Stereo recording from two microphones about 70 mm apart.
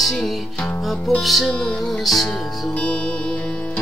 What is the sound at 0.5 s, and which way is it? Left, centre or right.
Music, left.